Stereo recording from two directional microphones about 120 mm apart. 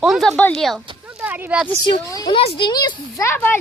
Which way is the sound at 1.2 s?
15° right (ahead or behind).